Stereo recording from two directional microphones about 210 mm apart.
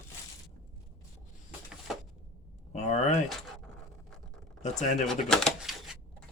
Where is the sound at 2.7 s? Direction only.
35° left (ahead or behind).